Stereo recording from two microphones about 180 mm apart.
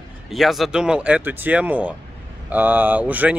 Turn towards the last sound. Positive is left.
turn(degrees=-10)  # may be behind; listen again after turning